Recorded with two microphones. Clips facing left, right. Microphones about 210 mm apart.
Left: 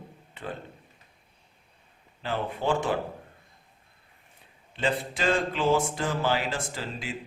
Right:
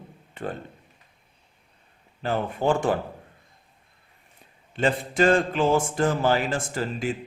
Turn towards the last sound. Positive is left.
turn(degrees=-50)  # may be behind; listen again after turning